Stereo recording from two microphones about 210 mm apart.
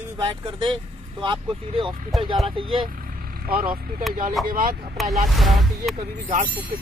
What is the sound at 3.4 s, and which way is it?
Speech, 40° right (ahead or behind).